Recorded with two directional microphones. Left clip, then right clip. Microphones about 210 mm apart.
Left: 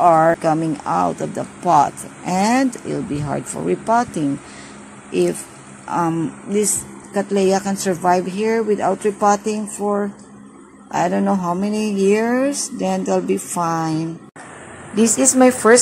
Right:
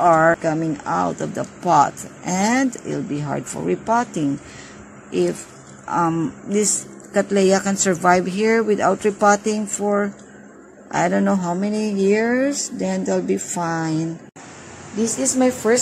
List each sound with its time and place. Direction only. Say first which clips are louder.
0.0 s speech: left 2 dB; centre (ahead or behind)
5.9 s speech: even; centre (ahead or behind)
7.2 s speech: right 1 dB; 15° right (ahead or behind)
15.0 s a woman's voice: left 6 dB; 20° left (ahead or behind)